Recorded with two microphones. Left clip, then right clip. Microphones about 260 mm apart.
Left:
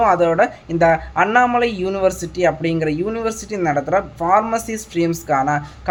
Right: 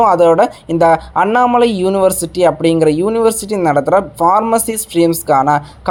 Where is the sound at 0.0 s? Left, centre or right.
Right.